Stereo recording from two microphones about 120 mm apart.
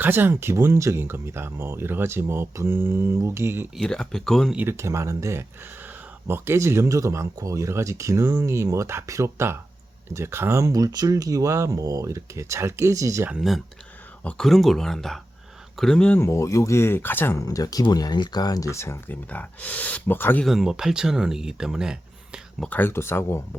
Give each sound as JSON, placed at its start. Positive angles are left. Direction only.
{"t": 0.0, "sound": "speech", "side_deg": -15}
{"t": 3.8, "sound": "speech", "side_deg": 5}
{"t": 4.5, "sound": "speech", "side_deg": -20}
{"t": 13.3, "sound": "speech", "side_deg": 0}
{"t": 20.4, "sound": "speech", "side_deg": 0}
{"t": 22.7, "sound": "speech", "side_deg": 20}